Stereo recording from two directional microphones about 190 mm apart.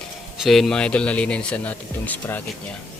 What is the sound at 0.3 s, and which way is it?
Speech, centre (ahead or behind).